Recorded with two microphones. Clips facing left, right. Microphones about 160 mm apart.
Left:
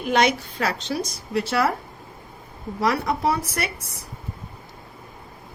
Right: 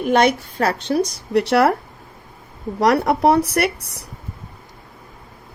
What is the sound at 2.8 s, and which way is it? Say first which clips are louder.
Speech: right 7 dB; 70° right (ahead or behind).